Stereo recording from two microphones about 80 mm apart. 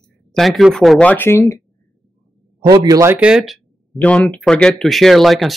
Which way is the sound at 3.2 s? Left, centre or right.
Centre.